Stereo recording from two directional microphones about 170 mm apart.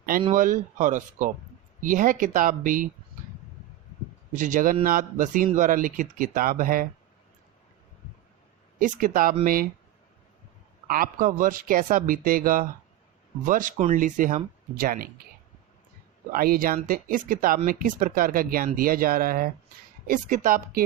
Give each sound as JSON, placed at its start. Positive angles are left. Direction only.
{"t": 0.3, "sound": "speech", "side_deg": -50}
{"t": 4.3, "sound": "speech", "side_deg": -50}
{"t": 8.8, "sound": "speech", "side_deg": -55}
{"t": 10.8, "sound": "speech", "side_deg": -55}
{"t": 16.3, "sound": "speech", "side_deg": -60}